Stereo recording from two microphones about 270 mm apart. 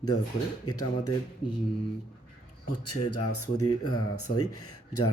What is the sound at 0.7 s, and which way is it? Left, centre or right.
Speech, left.